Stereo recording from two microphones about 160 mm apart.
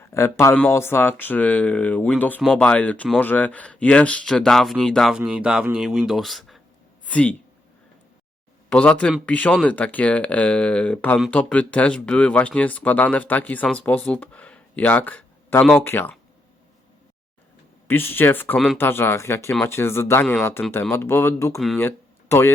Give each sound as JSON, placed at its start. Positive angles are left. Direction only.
{"t": 0.1, "sound": "speech", "side_deg": 15}
{"t": 2.4, "sound": "speech", "side_deg": 0}
{"t": 2.6, "sound": "speech", "side_deg": 10}
{"t": 8.7, "sound": "speech", "side_deg": 5}
{"t": 17.8, "sound": "speech", "side_deg": 15}